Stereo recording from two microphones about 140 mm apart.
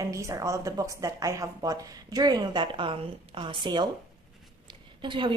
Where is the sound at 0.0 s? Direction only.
20° right (ahead or behind).